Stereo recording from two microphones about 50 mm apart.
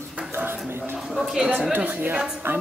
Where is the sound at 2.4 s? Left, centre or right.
Right.